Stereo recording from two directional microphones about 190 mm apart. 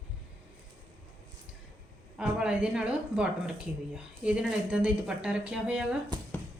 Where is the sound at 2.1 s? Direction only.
5° right (ahead or behind).